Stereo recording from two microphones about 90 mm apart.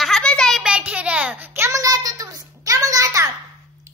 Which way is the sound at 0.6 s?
10° right (ahead or behind).